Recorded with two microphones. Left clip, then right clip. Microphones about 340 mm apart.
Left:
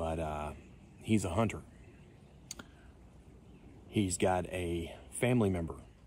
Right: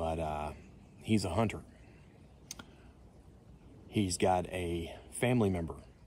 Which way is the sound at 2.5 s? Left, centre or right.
Centre.